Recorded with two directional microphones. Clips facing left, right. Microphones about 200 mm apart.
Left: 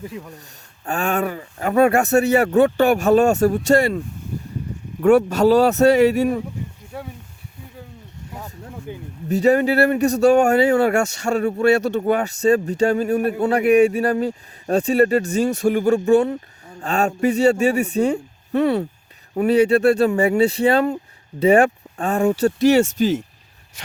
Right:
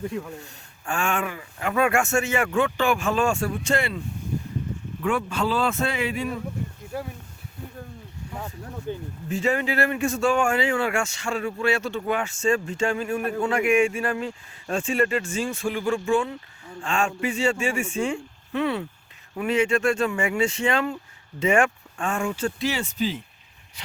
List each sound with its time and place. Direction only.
0.0 s speech: 5° left (ahead or behind)
0.9 s speech: 35° left (ahead or behind)
6.9 s speech: centre (ahead or behind)
8.9 s speech: 10° left (ahead or behind)
9.3 s speech: 40° left (ahead or behind)